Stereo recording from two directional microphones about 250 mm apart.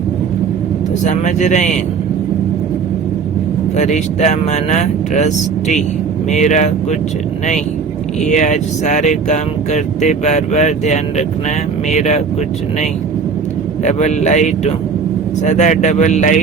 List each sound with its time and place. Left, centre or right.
1.0 s speech: left
3.8 s speech: left
8.2 s speech: left
13.8 s speech: left